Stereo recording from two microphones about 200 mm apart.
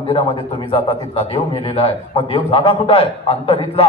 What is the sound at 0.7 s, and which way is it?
A man's voice, 30° left (ahead or behind).